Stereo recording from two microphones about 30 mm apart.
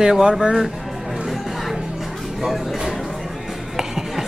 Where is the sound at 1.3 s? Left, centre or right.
Centre.